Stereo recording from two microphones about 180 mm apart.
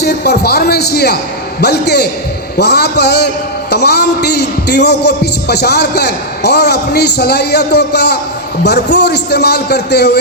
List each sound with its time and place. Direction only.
0.0 s a man's voice: 65° left (ahead or behind)